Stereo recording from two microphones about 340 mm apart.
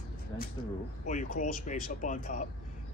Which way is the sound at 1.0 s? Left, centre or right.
Left.